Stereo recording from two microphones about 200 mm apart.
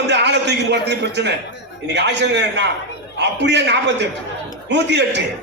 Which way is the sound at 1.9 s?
60° right (ahead or behind).